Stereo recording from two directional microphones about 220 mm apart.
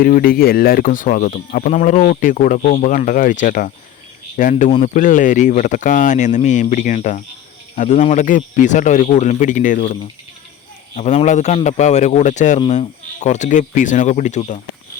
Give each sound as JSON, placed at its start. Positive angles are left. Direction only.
{"t": 0.0, "sound": "a man's voice", "side_deg": 40}